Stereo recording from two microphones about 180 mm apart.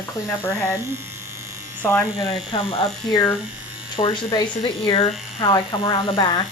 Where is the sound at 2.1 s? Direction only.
30° left (ahead or behind).